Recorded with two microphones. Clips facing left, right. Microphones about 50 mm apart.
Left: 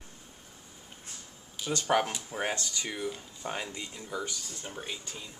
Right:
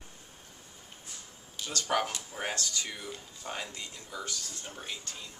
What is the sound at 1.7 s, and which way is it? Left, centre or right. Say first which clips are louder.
Speech: left 3 dB; centre.